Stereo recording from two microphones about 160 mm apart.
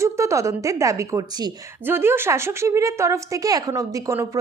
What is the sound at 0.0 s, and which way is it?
A woman's voice, 20° right (ahead or behind).